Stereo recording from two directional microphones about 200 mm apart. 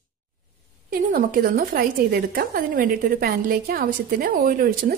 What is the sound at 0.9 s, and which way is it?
A woman's voice, 45° right (ahead or behind).